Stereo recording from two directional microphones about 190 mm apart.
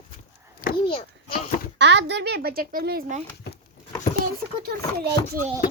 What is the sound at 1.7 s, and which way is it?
Speech, 65° right (ahead or behind).